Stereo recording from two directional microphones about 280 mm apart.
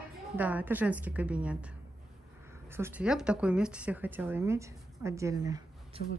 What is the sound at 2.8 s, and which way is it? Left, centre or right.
A woman's voice, centre.